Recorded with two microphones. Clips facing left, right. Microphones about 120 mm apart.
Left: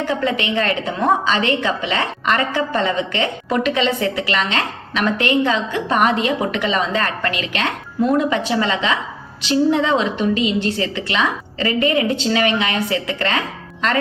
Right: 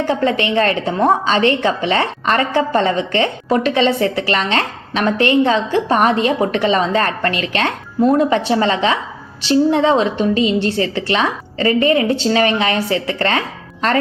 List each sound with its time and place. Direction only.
0.0 s a woman's voice: 30° right (ahead or behind)